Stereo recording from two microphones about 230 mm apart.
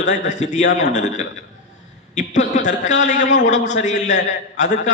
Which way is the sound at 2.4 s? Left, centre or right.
Left.